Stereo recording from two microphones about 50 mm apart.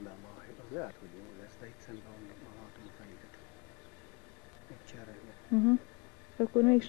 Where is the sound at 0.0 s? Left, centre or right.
Left.